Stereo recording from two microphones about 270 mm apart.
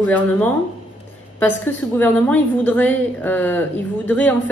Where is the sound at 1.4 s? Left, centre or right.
Centre.